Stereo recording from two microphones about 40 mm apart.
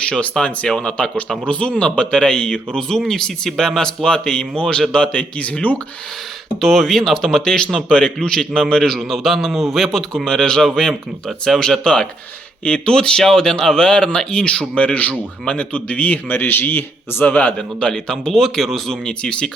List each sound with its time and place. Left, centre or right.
0.0 s speech: left
6.6 s speech: centre
9.0 s speech: centre; by 14.7 s left
14.8 s speech: left
17.2 s speech: left
17.6 s speech: left
18.3 s speech: centre
19.0 s speech: left